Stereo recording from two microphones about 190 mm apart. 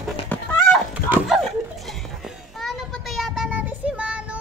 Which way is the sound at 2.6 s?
Centre (ahead or behind).